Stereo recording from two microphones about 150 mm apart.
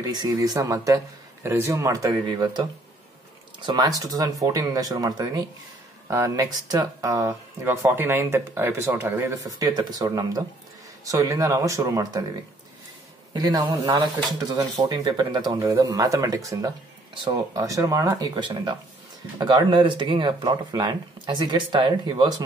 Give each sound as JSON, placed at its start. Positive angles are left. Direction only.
{"t": 0.0, "sound": "speech", "side_deg": -25}
{"t": 3.6, "sound": "speech", "side_deg": -25}
{"t": 13.3, "sound": "speech", "side_deg": -25}